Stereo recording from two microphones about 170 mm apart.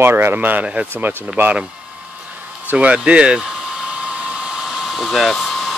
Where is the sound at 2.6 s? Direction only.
10° right (ahead or behind).